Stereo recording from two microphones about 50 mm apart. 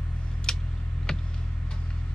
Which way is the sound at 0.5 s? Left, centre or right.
Centre.